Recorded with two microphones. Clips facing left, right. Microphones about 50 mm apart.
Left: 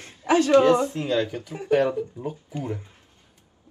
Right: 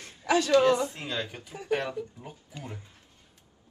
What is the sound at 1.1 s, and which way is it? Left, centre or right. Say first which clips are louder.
Speech: left 10 dB; right.